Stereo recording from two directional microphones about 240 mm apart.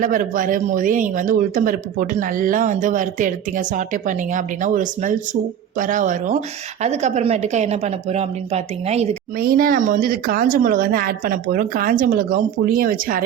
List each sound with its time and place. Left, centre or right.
0.0 s a woman's voice: right
9.4 s a woman's voice: right